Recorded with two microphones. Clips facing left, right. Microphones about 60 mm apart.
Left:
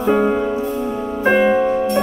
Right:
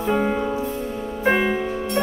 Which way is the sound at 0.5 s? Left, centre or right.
Left.